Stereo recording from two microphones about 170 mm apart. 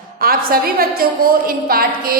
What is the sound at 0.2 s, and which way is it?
A woman's voice, 60° right (ahead or behind).